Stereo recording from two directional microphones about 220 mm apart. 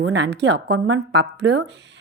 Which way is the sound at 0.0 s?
50° right (ahead or behind).